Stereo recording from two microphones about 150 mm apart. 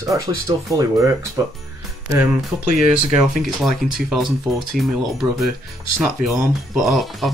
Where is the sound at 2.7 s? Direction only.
Centre (ahead or behind).